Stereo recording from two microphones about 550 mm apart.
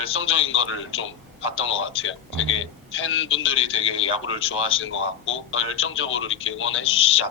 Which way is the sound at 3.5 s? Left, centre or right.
Centre.